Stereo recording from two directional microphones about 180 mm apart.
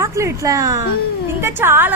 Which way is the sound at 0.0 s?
15° right (ahead or behind).